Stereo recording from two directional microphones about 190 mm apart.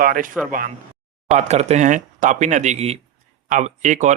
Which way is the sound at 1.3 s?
35° right (ahead or behind).